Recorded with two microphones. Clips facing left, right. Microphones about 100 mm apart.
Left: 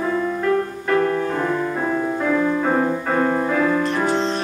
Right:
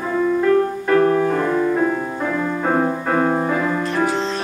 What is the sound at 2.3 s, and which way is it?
Music, 10° right (ahead or behind).